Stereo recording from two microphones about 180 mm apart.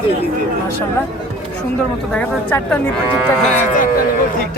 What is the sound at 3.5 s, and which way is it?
Speech, 45° left (ahead or behind).